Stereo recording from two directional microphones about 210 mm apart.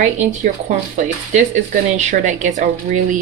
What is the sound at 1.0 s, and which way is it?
Speech, 35° right (ahead or behind).